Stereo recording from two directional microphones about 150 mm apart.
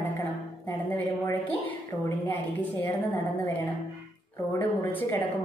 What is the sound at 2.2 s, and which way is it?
Speech, 15° left (ahead or behind).